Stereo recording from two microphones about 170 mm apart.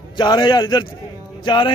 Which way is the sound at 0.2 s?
25° left (ahead or behind).